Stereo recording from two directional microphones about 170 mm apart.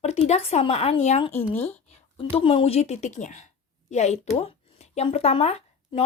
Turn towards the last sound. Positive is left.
turn(degrees=35)  # may be behind; listen again after turning